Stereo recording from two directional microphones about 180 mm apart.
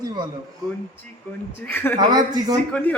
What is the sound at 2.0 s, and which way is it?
Speech, 20° right (ahead or behind).